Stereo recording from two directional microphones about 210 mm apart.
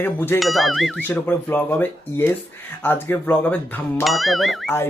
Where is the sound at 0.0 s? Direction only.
10° left (ahead or behind).